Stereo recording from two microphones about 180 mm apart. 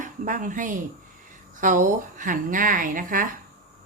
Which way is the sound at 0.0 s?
45° right (ahead or behind).